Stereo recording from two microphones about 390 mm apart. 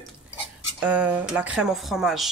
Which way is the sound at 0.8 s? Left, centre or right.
Centre.